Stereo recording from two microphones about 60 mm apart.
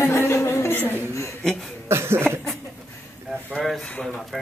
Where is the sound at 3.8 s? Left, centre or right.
Centre.